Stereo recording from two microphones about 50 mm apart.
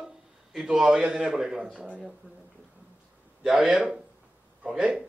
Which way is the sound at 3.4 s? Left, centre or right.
Centre.